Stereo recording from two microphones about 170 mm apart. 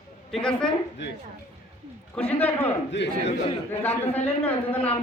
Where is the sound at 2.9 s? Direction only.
90° left.